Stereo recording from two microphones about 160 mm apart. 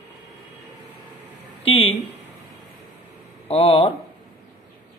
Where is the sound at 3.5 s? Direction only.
40° left (ahead or behind).